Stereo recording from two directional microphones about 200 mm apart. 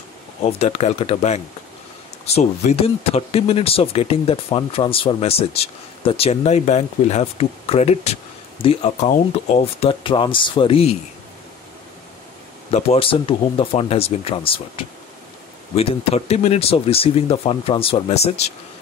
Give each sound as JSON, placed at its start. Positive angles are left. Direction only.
{"t": 0.4, "sound": "speech", "side_deg": 30}
{"t": 12.7, "sound": "speech", "side_deg": 30}